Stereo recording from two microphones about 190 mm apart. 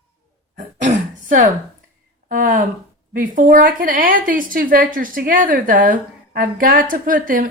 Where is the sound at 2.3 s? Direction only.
45° right (ahead or behind).